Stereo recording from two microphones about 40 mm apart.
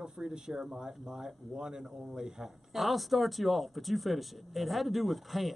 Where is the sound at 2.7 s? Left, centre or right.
Centre.